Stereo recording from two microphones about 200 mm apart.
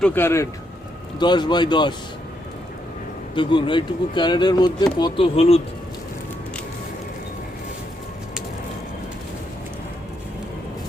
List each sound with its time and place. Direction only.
0.0 s speech: 10° left (ahead or behind)
1.2 s speech: 20° left (ahead or behind)
3.3 s speech: 25° left (ahead or behind)